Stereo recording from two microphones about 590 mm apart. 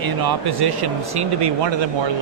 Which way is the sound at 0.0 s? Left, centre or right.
Right.